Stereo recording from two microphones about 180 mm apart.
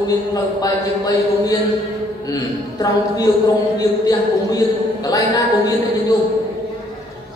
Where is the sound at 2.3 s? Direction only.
20° left (ahead or behind).